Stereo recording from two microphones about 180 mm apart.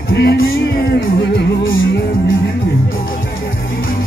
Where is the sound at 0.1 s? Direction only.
75° left (ahead or behind); by 1.9 s 90° left.